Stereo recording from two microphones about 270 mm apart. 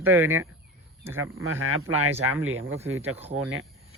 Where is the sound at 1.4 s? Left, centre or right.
Right.